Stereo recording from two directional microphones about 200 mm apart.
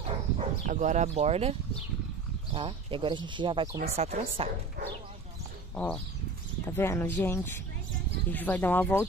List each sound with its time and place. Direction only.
0.0 s dog: 35° right (ahead or behind)
2.5 s speech: 25° right (ahead or behind)
6.6 s speech: 10° left (ahead or behind)